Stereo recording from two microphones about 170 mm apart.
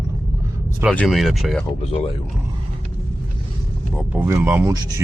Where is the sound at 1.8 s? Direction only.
35° left (ahead or behind).